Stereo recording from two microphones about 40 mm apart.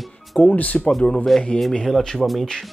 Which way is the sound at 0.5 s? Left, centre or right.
Left.